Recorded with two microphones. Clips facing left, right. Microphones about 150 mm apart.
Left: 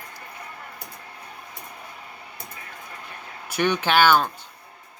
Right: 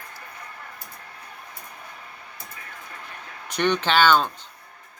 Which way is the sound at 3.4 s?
10° left (ahead or behind).